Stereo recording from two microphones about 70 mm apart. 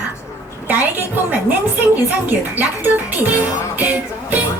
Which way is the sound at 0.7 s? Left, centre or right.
Right.